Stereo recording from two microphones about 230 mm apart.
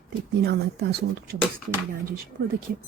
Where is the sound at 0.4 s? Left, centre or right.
Right.